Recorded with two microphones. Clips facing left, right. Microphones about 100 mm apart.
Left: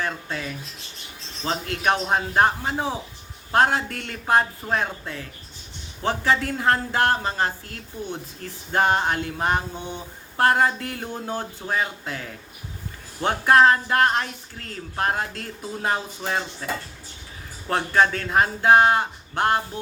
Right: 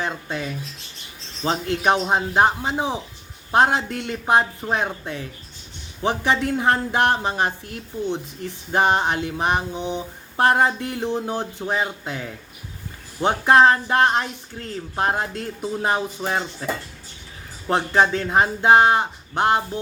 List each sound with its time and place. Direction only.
0.0 s speech: 20° right (ahead or behind)
1.5 s speech: 25° right (ahead or behind)
17.7 s speech: 20° right (ahead or behind)